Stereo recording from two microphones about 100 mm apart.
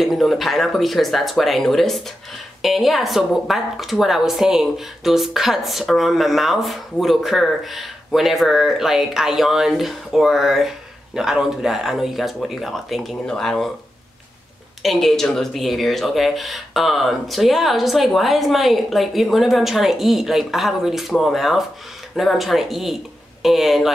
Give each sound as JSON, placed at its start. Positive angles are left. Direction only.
{"t": 0.0, "sound": "speech", "side_deg": 0}
{"t": 14.8, "sound": "speech", "side_deg": 0}